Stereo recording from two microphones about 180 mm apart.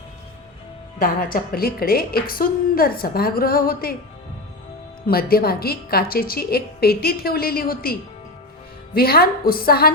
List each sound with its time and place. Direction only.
0.9 s a woman's voice: 55° left (ahead or behind)
5.0 s a woman's voice: 55° left (ahead or behind)
9.0 s a woman's voice: 55° left (ahead or behind)